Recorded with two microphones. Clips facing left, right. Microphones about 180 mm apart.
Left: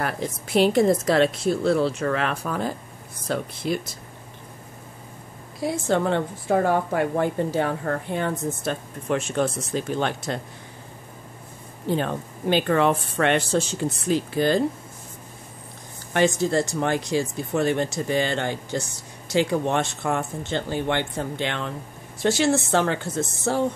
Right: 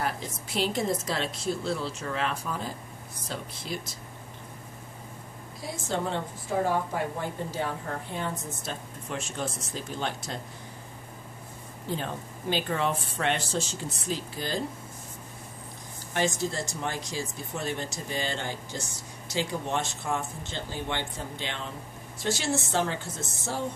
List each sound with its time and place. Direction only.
0.0 s a woman's voice: 60° left (ahead or behind)
5.6 s a woman's voice: 65° left (ahead or behind)
11.9 s a woman's voice: 65° left (ahead or behind)
16.1 s a woman's voice: 65° left (ahead or behind)